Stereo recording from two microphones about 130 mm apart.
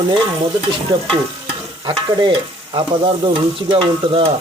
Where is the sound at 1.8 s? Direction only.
40° right (ahead or behind).